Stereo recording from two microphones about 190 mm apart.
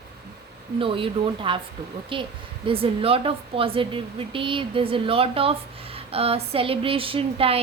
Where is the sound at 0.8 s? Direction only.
30° right (ahead or behind).